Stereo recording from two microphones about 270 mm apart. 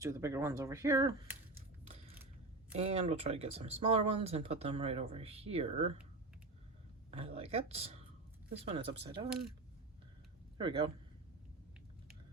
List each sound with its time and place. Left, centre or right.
0.0 s speech: centre
2.7 s speech: right
7.1 s speech: right
10.6 s speech: centre